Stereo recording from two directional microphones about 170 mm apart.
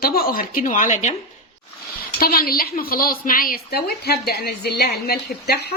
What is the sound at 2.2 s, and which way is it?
A woman's voice, 60° left (ahead or behind).